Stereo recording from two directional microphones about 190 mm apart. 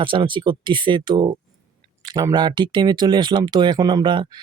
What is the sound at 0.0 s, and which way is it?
Speech, 25° right (ahead or behind).